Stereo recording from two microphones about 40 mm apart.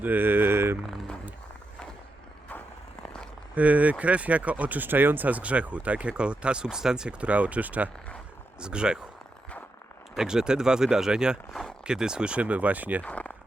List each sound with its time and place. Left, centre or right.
0.0 s a sound: right
3.0 s a sound: left
3.5 s speech: right
4.9 s speech: right
5.3 s speech: right; by 7.2 s centre
7.2 s speech: right
8.6 s speech: right
10.2 s speech: centre; by 13.0 s right
13.0 s speech: left